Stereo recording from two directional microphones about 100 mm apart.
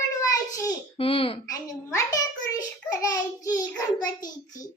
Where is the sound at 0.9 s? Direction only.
65° left (ahead or behind).